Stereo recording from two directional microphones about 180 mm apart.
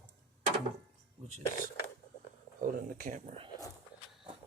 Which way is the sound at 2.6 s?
50° right (ahead or behind).